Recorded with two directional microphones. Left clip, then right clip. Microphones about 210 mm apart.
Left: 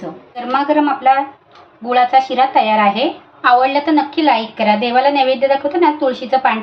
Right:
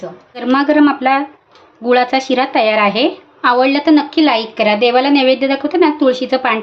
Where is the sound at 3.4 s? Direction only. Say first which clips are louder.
Left 1 dB; 40° right (ahead or behind).